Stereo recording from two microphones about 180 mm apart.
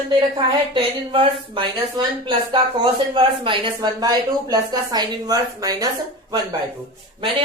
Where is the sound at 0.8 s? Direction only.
30° right (ahead or behind).